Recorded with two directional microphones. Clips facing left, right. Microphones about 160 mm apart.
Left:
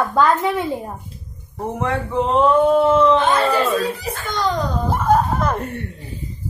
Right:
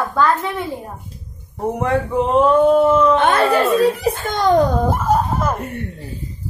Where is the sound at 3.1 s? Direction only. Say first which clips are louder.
Right 2 dB; 65° right (ahead or behind).